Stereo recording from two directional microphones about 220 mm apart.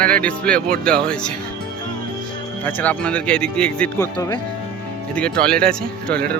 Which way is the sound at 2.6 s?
5° left (ahead or behind).